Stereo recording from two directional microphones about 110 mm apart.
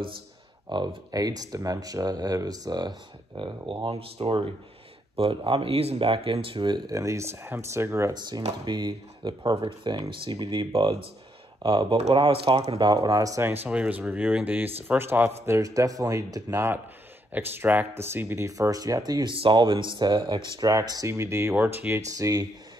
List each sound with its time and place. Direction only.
0.7 s speech: 40° right (ahead or behind)
4.2 s speech: 55° right (ahead or behind)
6.9 s speech: 30° right (ahead or behind)
8.6 s speech: 40° right (ahead or behind)
12.3 s speech: 60° right (ahead or behind)
12.7 s speech: 40° right (ahead or behind)
13.7 s speech: 10° right (ahead or behind)
15.4 s speech: 30° right (ahead or behind)
17.3 s speech: 20° right (ahead or behind); by 19.3 s 35° right (ahead or behind)
19.3 s speech: 50° right (ahead or behind); by 22.5 s 35° right (ahead or behind)